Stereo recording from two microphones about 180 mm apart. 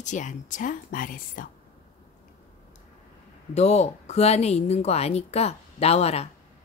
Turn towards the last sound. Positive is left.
turn(degrees=35)  # may be behind; listen again after turning